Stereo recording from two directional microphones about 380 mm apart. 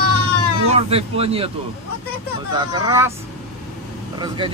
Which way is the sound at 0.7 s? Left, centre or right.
Centre.